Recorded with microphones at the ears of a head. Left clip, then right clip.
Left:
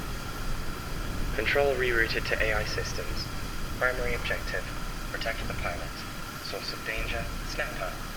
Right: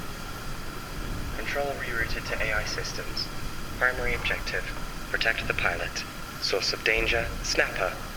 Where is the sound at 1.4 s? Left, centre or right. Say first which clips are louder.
Left 5 dB; left.